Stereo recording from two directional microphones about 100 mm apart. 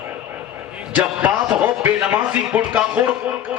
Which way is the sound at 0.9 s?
15° right (ahead or behind).